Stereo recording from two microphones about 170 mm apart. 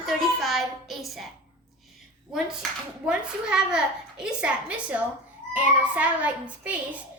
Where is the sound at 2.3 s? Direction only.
5° right (ahead or behind).